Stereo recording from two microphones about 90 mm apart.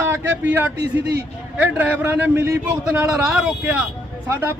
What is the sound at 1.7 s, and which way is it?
Speech, 20° right (ahead or behind).